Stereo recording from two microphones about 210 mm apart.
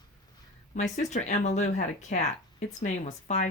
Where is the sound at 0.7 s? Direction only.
35° left (ahead or behind).